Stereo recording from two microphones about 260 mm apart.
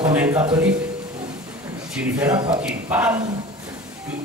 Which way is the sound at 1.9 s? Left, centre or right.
Centre.